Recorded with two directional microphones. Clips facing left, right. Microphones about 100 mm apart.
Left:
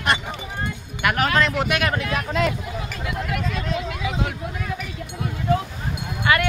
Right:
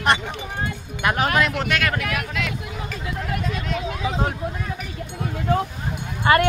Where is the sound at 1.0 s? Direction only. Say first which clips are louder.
Even; 25° right (ahead or behind).